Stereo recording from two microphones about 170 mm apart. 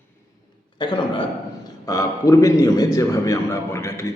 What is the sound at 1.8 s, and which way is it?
A man's voice, 20° left (ahead or behind).